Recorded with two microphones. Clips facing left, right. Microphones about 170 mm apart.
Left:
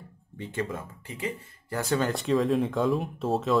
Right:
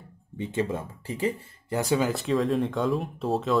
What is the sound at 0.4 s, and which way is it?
Speech, 20° right (ahead or behind).